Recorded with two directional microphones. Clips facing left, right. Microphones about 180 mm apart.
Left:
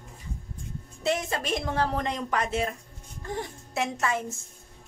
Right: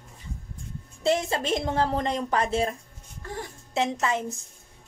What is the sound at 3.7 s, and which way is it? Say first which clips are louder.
Speech: right 3 dB; 20° right (ahead or behind).